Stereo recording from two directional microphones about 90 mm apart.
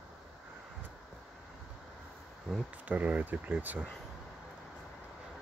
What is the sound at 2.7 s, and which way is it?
Speech, 15° right (ahead or behind).